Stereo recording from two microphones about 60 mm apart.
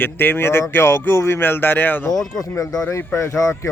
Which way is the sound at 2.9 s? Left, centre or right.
Left.